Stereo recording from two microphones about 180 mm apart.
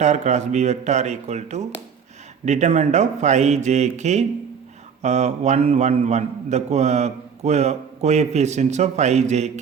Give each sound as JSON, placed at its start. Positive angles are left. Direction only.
{"t": 0.0, "sound": "a man's voice", "side_deg": -40}